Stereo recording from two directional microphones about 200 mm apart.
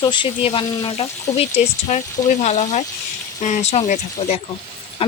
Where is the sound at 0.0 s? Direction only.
25° left (ahead or behind).